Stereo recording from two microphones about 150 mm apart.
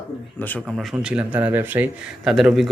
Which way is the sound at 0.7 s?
5° right (ahead or behind).